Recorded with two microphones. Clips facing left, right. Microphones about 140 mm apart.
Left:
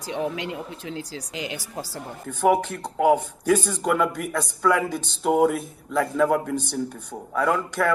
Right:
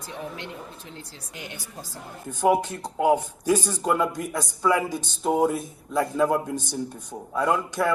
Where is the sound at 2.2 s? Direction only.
10° right (ahead or behind).